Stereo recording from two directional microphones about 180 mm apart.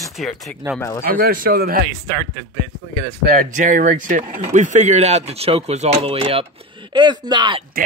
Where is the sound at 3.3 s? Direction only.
45° right (ahead or behind); by 7.6 s 25° right (ahead or behind).